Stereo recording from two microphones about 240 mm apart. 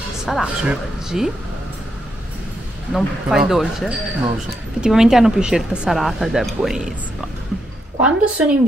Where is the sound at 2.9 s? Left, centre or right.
Centre.